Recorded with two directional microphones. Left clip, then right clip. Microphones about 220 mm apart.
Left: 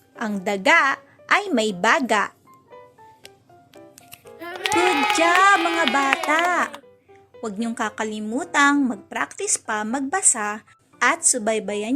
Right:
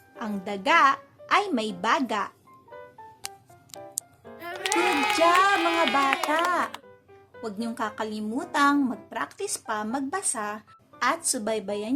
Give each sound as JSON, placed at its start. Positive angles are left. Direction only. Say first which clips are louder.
{"t": 0.2, "sound": "a woman's voice", "louder": "left 8 dB", "side_deg": 20}
{"t": 4.4, "sound": "speech", "louder": "left 5 dB", "side_deg": 0}
{"t": 7.4, "sound": "a woman's voice", "louder": "left 5 dB", "side_deg": 15}